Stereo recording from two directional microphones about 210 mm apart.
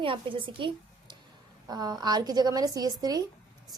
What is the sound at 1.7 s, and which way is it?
A woman's voice, 20° right (ahead or behind).